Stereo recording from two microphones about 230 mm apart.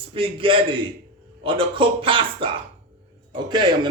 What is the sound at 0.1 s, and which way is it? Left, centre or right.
A man's voice, right.